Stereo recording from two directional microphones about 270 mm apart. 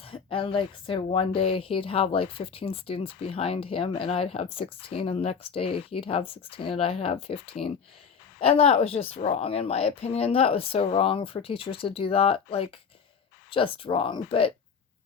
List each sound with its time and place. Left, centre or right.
0.0 s speech: centre